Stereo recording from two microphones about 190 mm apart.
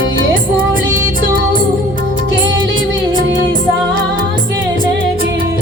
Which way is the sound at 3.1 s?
75° right (ahead or behind).